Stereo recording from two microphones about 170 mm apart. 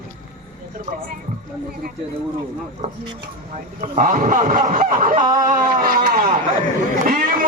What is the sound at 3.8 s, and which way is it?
A man's voice, 55° right (ahead or behind).